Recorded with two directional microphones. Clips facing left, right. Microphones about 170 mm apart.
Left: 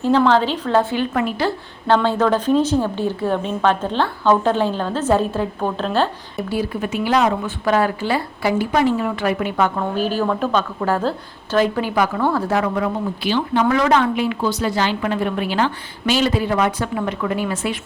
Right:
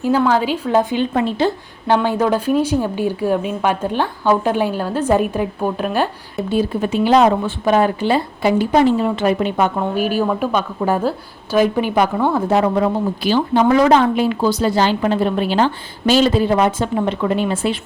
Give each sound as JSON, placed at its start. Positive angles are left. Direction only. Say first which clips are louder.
{"t": 0.0, "sound": "a woman's voice", "louder": "even", "side_deg": -10}
{"t": 6.5, "sound": "a woman's voice", "louder": "right 5 dB", "side_deg": -25}